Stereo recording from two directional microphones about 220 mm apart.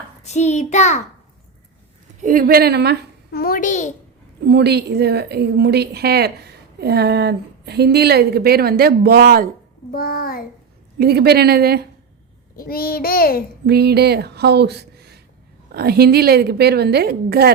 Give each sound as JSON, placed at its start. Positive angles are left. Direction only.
{"t": 0.2, "sound": "a child's voice", "side_deg": 30}
{"t": 2.2, "sound": "a woman's voice", "side_deg": -40}
{"t": 3.3, "sound": "a child's voice", "side_deg": 40}
{"t": 4.4, "sound": "a woman's voice", "side_deg": -50}
{"t": 9.9, "sound": "a child's voice", "side_deg": 45}
{"t": 10.9, "sound": "a woman's voice", "side_deg": -45}
{"t": 12.5, "sound": "a child's voice", "side_deg": 45}
{"t": 13.7, "sound": "a woman's voice", "side_deg": -45}